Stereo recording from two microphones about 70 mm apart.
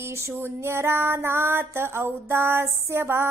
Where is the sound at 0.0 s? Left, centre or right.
Right.